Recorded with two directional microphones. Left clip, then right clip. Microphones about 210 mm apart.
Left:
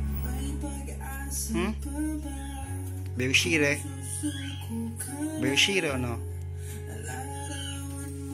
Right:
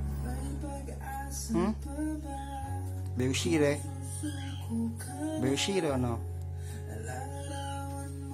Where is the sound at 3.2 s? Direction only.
15° right (ahead or behind).